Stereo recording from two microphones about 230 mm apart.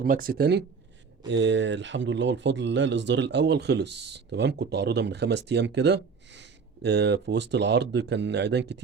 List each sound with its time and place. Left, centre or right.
0.0 s speech: right